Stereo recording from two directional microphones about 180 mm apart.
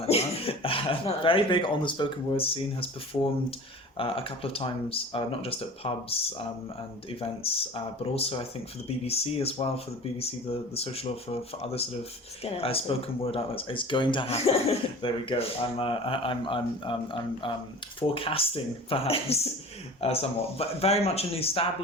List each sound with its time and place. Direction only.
0.0 s speech: 35° left (ahead or behind)